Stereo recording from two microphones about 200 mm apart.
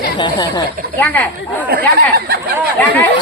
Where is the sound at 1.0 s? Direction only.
10° left (ahead or behind).